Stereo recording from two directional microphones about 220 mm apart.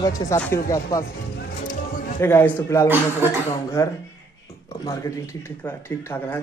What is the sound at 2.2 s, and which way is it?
Speech, 10° left (ahead or behind).